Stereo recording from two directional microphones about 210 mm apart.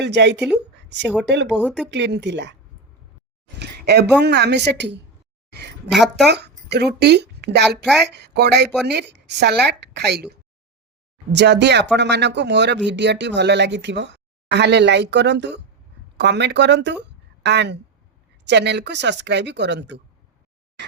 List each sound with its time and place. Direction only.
0.0 s speech: 55° right (ahead or behind)
1.5 s speech: 5° right (ahead or behind)
1.9 s speech: 55° right (ahead or behind)
3.6 s a sound: 50° right (ahead or behind)
4.2 s a woman's voice: 55° right (ahead or behind)
11.3 s speech: 55° right (ahead or behind)